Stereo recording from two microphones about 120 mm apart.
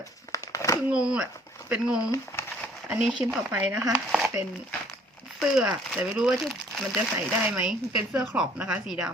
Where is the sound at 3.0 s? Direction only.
5° right (ahead or behind).